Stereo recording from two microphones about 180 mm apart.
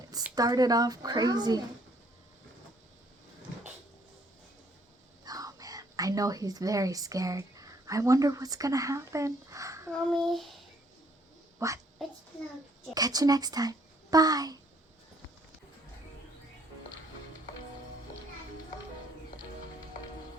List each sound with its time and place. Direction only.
0.3 s speech: 20° right (ahead or behind)
5.2 s speech: 20° right (ahead or behind)
9.9 s child singing: centre (ahead or behind)
11.6 s speech: 15° right (ahead or behind)
12.9 s a child's voice: 20° right (ahead or behind)